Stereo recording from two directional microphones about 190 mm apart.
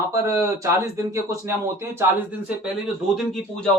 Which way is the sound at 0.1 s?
15° right (ahead or behind).